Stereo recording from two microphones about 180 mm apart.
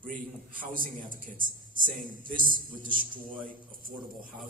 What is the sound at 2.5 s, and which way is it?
Speech, 50° right (ahead or behind).